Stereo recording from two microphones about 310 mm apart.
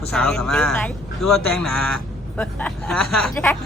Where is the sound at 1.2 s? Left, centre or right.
Left.